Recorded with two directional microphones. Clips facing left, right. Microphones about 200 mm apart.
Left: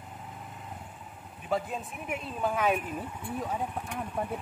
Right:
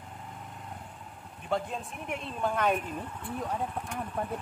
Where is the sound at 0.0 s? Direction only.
5° left (ahead or behind).